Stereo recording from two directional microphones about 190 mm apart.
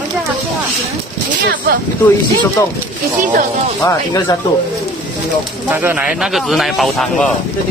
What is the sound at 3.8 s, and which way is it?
Speech, 15° left (ahead or behind).